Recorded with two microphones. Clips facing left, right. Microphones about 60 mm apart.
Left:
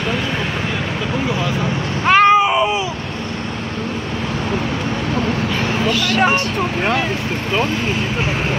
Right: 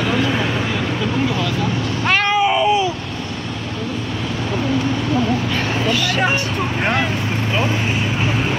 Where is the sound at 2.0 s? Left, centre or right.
Left.